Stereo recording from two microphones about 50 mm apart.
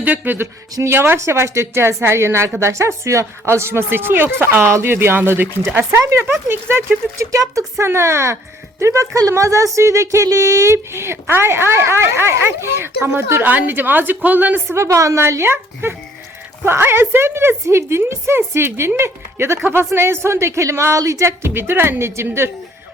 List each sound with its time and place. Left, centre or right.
0.0 s speech: right
0.3 s speech: right
1.2 s speech: right
6.5 s speech: right
7.2 s a woman's voice: right
7.9 s a woman's voice: right
9.7 s speech: right
13.4 s a woman's voice: right
14.7 s a woman's voice: right